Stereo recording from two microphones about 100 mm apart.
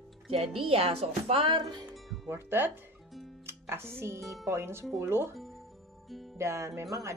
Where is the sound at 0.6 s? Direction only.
70° right (ahead or behind); by 1.9 s 50° right (ahead or behind).